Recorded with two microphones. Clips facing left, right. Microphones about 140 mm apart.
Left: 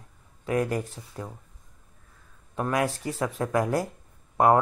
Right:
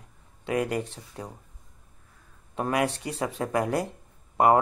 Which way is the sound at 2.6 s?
5° right (ahead or behind).